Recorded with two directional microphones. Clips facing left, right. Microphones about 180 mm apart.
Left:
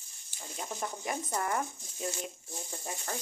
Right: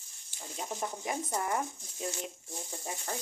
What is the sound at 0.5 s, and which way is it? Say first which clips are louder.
Speech: right 1 dB; 25° right (ahead or behind).